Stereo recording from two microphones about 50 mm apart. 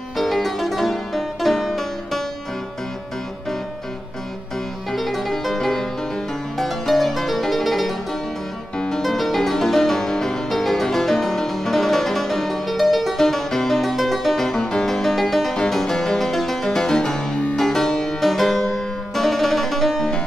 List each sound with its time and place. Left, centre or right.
0.2 s music: centre
4.9 s music: centre
8.7 s music: centre
9.0 s music: centre
15.5 s harpsichord: centre
18.6 s music: centre